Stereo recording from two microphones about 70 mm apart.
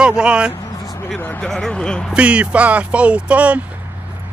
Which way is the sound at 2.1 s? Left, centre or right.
Centre.